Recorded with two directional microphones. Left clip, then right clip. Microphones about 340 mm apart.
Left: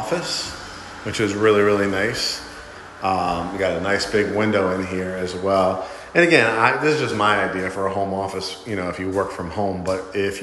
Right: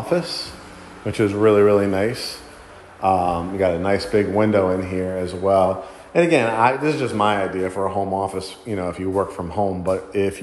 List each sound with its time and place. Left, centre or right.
0.1 s speech: centre